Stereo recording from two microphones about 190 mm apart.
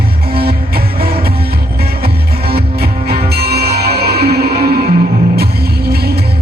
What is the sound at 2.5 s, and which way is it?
Music, 55° right (ahead or behind).